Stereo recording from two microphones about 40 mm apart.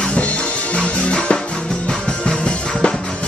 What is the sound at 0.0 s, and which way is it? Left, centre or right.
Music, left.